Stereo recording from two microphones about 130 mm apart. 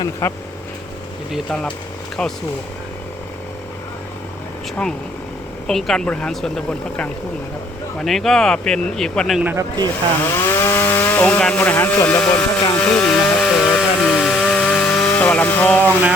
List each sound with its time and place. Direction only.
0.2 s speech: 20° left (ahead or behind)
5.6 s a woman's voice: 5° left (ahead or behind)
9.4 s speech: 15° right (ahead or behind)
9.8 s speech: 20° left (ahead or behind)
12.7 s chainsaw: 10° left (ahead or behind)